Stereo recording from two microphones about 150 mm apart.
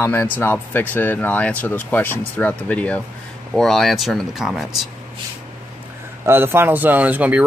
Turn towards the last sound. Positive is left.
turn(degrees=-10)  # may be behind; listen again after turning